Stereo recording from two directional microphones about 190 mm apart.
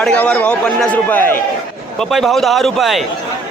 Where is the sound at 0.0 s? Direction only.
5° left (ahead or behind).